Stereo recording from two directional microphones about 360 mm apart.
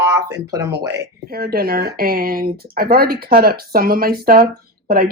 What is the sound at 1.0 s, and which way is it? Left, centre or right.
Speech, right.